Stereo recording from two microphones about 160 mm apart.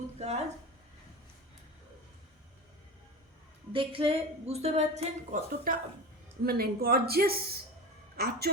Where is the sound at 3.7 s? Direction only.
35° right (ahead or behind).